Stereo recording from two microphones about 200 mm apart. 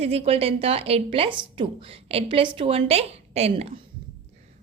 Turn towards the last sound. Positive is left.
turn(degrees=-30)  # may be behind; listen again after turning